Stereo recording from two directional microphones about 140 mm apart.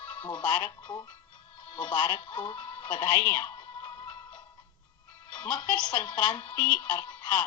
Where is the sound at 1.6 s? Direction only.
35° left (ahead or behind).